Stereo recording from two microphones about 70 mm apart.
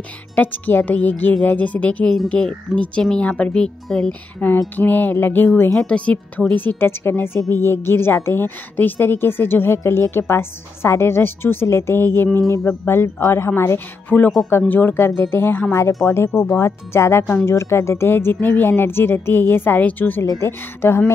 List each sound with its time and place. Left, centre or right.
0.4 s speech: left
4.7 s speech: left
5.8 s a woman's voice: centre; by 13.5 s left
14.0 s a woman's voice: left
15.7 s a woman's voice: left